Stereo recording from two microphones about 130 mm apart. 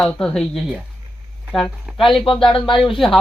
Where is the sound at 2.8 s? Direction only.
Centre (ahead or behind).